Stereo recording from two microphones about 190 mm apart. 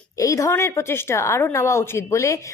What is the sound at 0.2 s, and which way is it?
Speech, 15° left (ahead or behind).